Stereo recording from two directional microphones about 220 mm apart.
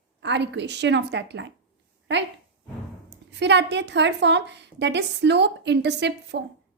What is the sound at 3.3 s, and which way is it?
A woman's voice, 50° right (ahead or behind).